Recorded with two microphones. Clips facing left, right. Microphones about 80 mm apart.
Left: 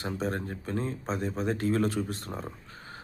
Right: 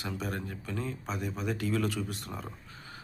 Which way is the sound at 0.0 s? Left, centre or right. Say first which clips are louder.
Left 4 dB; left.